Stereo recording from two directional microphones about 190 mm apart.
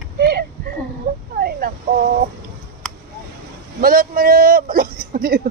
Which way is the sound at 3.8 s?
50° right (ahead or behind).